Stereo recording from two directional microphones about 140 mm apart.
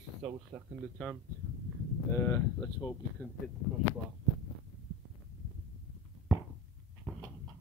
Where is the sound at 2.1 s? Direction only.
20° left (ahead or behind).